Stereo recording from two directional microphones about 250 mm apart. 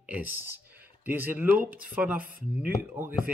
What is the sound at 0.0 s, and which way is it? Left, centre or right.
Speech, centre.